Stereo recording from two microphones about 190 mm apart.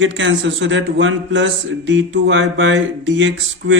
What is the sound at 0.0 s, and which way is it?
Speech, 75° right (ahead or behind).